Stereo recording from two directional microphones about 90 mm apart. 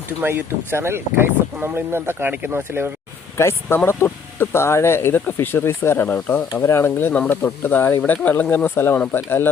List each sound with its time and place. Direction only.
0.2 s speech: 25° right (ahead or behind)
3.3 s speech: 30° left (ahead or behind)
6.5 s speech: 35° left (ahead or behind)